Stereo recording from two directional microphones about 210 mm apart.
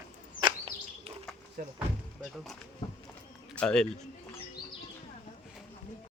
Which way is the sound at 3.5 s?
5° left (ahead or behind).